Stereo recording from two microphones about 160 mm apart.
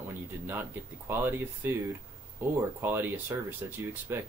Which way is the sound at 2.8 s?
15° right (ahead or behind).